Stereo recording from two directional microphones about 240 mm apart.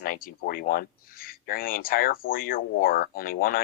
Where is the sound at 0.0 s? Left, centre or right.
Left.